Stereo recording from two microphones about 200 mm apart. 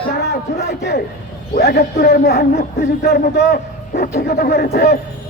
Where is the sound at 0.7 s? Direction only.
55° left (ahead or behind).